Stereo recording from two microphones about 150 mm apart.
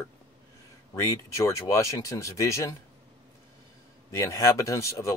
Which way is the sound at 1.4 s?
20° left (ahead or behind).